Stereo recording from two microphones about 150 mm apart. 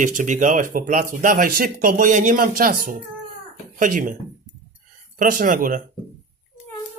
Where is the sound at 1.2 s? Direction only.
70° right (ahead or behind).